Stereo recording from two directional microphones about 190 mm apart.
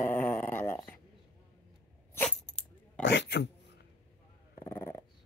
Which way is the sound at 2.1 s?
5° left (ahead or behind).